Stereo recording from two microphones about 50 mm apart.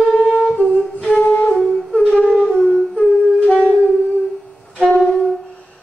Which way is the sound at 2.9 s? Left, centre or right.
Left.